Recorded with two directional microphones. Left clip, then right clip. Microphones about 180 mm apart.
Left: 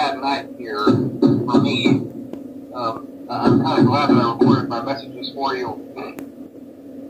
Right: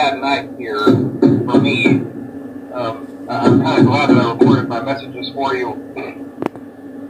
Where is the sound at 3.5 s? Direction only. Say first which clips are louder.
Right 4 dB; 25° right (ahead or behind).